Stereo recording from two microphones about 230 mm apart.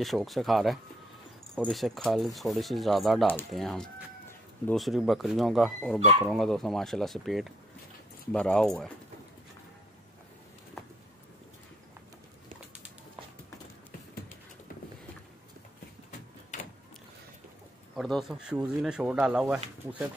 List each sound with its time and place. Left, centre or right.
0.0 s speech: centre
17.9 s speech: centre